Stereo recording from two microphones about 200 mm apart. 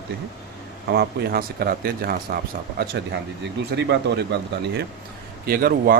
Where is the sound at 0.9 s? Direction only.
55° right (ahead or behind).